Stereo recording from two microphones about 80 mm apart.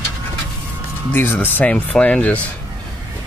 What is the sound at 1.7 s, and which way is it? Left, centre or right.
Speech, centre.